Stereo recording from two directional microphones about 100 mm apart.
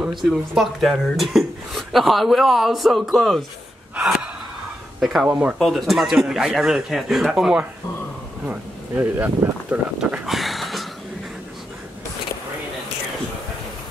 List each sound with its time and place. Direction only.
0.3 s speech: centre (ahead or behind)
3.9 s gasp: 10° right (ahead or behind)
5.0 s speech: centre (ahead or behind)
5.3 s speech: 15° right (ahead or behind)
5.6 s speech: centre (ahead or behind)
8.5 s speech: 20° right (ahead or behind)
9.9 s a sound: 5° right (ahead or behind)